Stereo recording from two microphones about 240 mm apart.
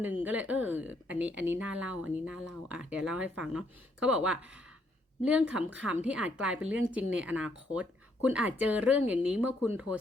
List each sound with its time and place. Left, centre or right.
0.0 s a woman's voice: centre